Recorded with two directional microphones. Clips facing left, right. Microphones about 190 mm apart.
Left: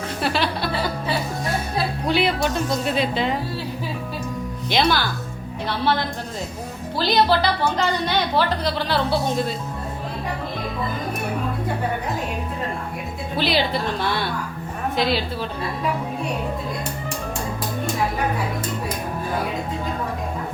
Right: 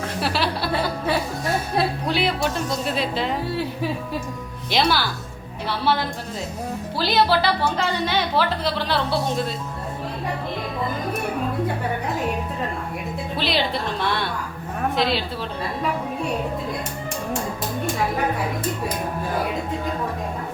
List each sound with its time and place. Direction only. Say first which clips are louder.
0.2 s a woman's voice: left 1 dB; 5° right (ahead or behind)
2.0 s a woman's voice: left 2 dB; centre (ahead or behind)
4.7 s a woman's voice: left 1 dB; 5° right (ahead or behind)
13.3 s a woman's voice: left 3 dB; centre (ahead or behind)